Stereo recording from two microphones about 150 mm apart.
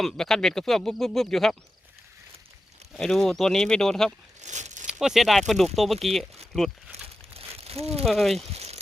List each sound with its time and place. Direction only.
0.0 s speech: 5° left (ahead or behind)
2.9 s speech: 5° left (ahead or behind)
4.4 s a sound: 50° right (ahead or behind)
4.9 s speech: 5° right (ahead or behind)
6.9 s crumpling: 45° right (ahead or behind)
8.0 s speech: centre (ahead or behind)
8.5 s a sound: 45° right (ahead or behind)